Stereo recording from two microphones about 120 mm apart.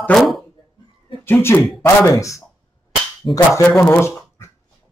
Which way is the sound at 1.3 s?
20° left (ahead or behind).